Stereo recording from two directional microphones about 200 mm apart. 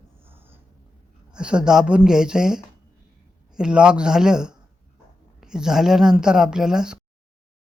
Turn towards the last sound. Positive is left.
turn(degrees=-5)  # may be behind; listen again after turning